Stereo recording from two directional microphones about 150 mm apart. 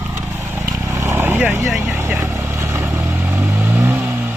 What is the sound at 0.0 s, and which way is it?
Vehicle, 15° right (ahead or behind).